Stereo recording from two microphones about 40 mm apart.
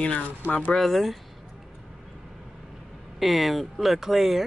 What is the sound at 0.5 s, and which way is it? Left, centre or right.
Speech, left.